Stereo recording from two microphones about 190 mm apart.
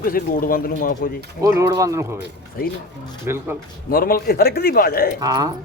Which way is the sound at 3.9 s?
50° left (ahead or behind).